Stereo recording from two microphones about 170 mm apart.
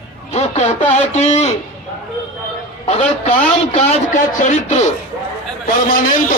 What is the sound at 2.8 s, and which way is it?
A man's voice, 40° left (ahead or behind).